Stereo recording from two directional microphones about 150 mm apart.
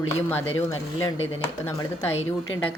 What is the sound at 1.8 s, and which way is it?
Speech, 15° left (ahead or behind).